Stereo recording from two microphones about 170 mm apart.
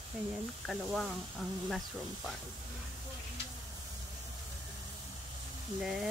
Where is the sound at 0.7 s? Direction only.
5° right (ahead or behind).